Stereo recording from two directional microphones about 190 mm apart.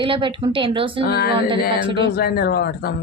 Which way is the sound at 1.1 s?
55° left (ahead or behind).